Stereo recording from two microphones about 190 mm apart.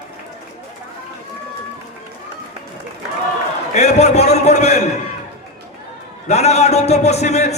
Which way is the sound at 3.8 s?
35° left (ahead or behind).